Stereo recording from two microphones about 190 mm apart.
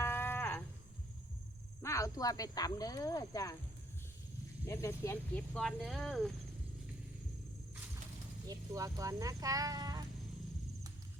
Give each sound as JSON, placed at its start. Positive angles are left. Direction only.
{"t": 0.0, "sound": "livestock", "side_deg": 10}
{"t": 1.8, "sound": "speech", "side_deg": 15}
{"t": 4.6, "sound": "speech", "side_deg": 15}
{"t": 5.5, "sound": "speech", "side_deg": 0}
{"t": 8.4, "sound": "speech", "side_deg": -20}